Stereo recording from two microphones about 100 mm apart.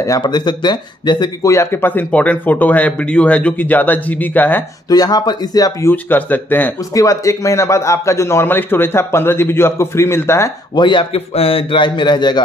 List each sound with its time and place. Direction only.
0.2 s speech: 45° left (ahead or behind)
1.4 s a man's voice: 30° left (ahead or behind)
4.8 s speech: 40° left (ahead or behind)
5.9 s a man's voice: 20° left (ahead or behind)
6.9 s a man's voice: 35° left (ahead or behind)
10.7 s speech: 50° left (ahead or behind)
11.1 s speech: 75° left (ahead or behind); by 12.4 s 50° left (ahead or behind)